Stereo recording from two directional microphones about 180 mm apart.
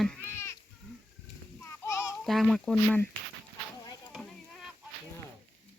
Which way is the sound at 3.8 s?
20° left (ahead or behind).